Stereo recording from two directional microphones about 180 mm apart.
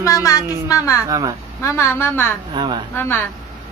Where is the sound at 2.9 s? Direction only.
10° left (ahead or behind).